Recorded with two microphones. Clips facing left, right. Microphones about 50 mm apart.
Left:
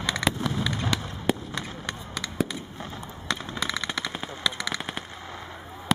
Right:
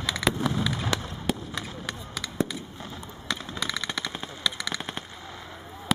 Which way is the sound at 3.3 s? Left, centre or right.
Centre.